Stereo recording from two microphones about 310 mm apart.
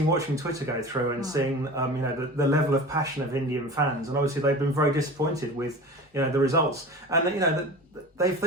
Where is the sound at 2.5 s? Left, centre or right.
Centre.